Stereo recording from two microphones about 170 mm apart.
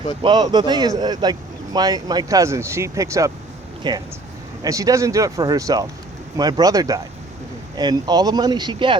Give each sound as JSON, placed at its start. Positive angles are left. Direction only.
{"t": 0.2, "sound": "speech", "side_deg": -25}